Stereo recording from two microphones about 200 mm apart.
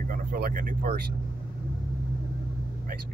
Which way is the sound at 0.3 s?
45° right (ahead or behind).